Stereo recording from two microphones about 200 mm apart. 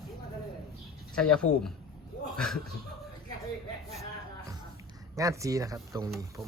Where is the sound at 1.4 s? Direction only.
90° left.